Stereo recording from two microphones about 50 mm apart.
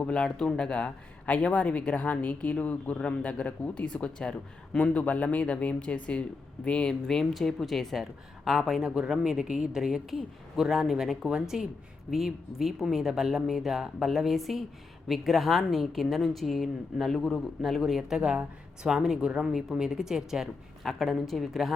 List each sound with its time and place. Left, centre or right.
0.0 s speech: centre
7.1 s a woman's voice: centre
18.2 s speech: centre
20.8 s a woman's voice: centre